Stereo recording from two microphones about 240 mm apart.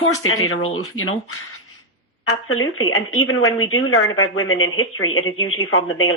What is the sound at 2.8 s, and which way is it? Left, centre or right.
Speech, left.